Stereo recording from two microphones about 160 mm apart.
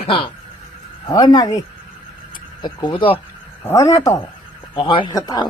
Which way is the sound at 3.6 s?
20° left (ahead or behind).